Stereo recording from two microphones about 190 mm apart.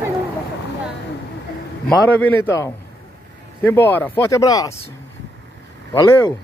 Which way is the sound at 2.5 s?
15° left (ahead or behind).